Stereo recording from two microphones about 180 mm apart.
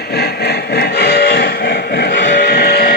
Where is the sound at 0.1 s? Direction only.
65° left (ahead or behind).